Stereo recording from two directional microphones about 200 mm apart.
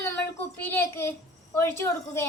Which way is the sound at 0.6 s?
10° left (ahead or behind).